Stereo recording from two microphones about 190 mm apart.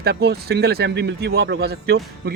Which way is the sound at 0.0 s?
60° right (ahead or behind).